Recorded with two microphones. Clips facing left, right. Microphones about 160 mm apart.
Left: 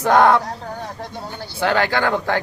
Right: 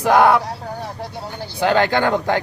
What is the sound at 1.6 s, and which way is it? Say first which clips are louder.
Speech: right 2 dB; 20° right (ahead or behind).